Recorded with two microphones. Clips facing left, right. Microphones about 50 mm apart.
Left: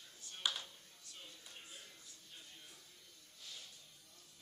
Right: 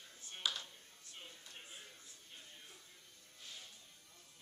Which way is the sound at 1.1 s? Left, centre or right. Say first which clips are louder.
Right 1 dB; right.